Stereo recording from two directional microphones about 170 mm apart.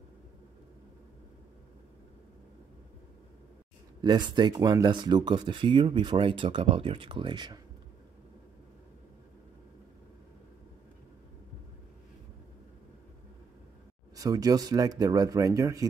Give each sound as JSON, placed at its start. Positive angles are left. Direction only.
{"t": 4.0, "sound": "speech", "side_deg": -25}
{"t": 14.1, "sound": "speech", "side_deg": -20}